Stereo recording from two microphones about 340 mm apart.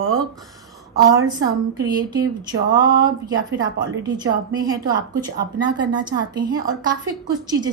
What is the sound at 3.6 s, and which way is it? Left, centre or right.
A woman's voice, centre.